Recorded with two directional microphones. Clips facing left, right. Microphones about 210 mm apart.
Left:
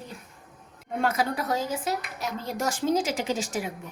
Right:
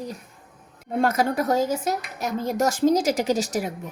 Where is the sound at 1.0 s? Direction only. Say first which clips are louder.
Right 5 dB; 45° right (ahead or behind).